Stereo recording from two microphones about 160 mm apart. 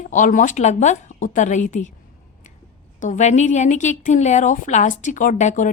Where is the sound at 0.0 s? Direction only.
55° left (ahead or behind).